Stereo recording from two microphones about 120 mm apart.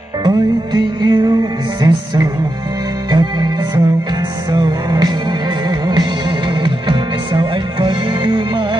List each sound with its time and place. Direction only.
0.7 s music: 35° right (ahead or behind)